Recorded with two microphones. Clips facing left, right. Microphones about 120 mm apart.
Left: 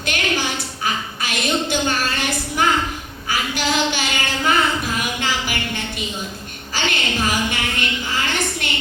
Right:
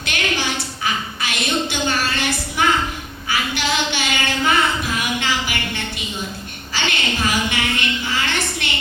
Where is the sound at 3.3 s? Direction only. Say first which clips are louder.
Even; 40° left (ahead or behind).